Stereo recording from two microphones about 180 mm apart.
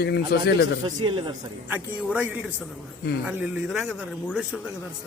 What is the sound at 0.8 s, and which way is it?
Speech, 25° right (ahead or behind).